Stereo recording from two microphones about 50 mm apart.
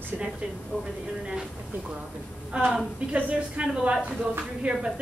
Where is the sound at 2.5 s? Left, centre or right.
Right.